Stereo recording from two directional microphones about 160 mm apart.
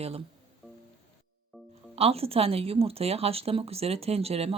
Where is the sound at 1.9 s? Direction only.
40° right (ahead or behind).